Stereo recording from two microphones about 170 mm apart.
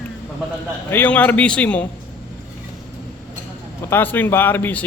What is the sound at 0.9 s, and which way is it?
A man's voice, 10° left (ahead or behind).